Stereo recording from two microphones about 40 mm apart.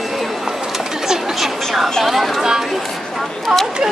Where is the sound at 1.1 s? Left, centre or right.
Centre.